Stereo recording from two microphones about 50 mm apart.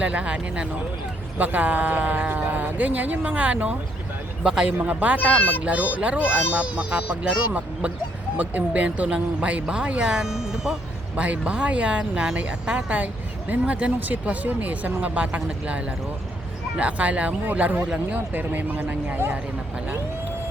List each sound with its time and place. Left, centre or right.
0.0 s speech: right
4.8 s speech: right
5.3 s a child's voice: left
5.6 s speech: right; by 10.8 s centre
11.2 s speech: right
18.3 s speech: right